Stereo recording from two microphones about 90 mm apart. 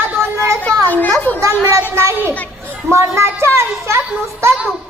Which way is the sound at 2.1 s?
25° right (ahead or behind).